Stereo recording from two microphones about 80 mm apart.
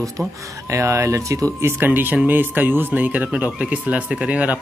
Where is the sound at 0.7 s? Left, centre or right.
Right.